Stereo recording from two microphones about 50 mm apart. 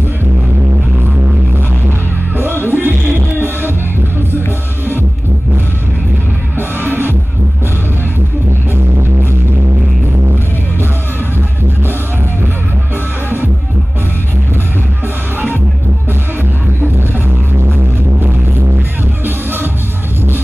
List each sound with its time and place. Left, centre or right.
1.9 s music: right
6.8 s music: right
19.2 s music: right